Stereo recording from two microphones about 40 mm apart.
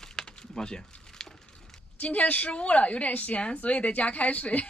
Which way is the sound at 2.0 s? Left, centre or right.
Left.